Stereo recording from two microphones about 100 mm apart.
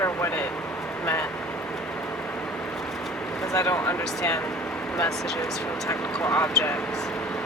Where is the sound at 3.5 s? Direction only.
30° left (ahead or behind).